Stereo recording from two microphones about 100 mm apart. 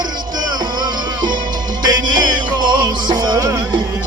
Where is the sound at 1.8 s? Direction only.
45° right (ahead or behind).